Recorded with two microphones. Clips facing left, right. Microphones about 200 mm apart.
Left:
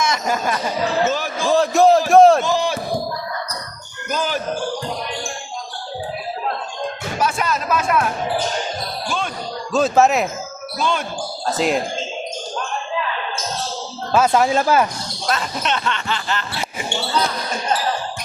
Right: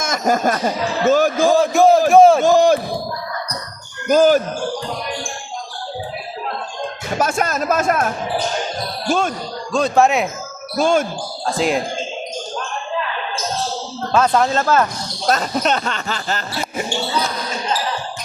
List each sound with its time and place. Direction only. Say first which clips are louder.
0.0 s speech: right 3 dB; 45° right (ahead or behind)
1.5 s a sound: left 1 dB; centre (ahead or behind)
2.4 s speech: right 8 dB; 45° right (ahead or behind)
4.1 s speech: right 11 dB; 45° right (ahead or behind)
7.2 s speech: right 2 dB; 45° right (ahead or behind)
9.7 s speech: even; 5° left (ahead or behind)
10.8 s speech: right 6 dB; 45° right (ahead or behind)
11.4 s speech: right 1 dB; centre (ahead or behind)
14.1 s speech: even; 5° left (ahead or behind)
15.3 s speech: right 5 dB; 40° right (ahead or behind)